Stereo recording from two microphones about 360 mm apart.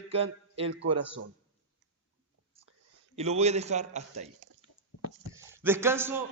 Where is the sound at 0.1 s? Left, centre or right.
Centre.